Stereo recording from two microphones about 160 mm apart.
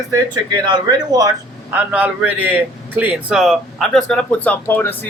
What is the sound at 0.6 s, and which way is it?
Speech, 25° right (ahead or behind).